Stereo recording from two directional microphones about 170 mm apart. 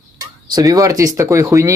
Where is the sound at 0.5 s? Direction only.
20° right (ahead or behind).